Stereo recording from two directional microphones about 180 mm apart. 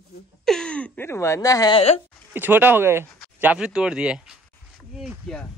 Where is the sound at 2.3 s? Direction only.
10° right (ahead or behind).